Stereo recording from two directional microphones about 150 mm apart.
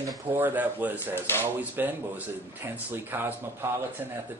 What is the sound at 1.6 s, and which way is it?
Speech, 10° right (ahead or behind).